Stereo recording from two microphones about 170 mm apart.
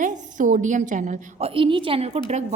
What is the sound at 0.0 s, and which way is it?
A woman's voice, 50° right (ahead or behind).